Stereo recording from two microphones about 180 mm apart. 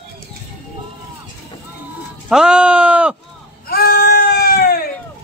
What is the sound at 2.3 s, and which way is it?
Sheep, 5° right (ahead or behind).